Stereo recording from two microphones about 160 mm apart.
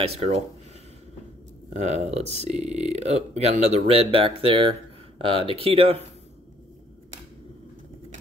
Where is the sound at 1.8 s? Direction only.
45° right (ahead or behind).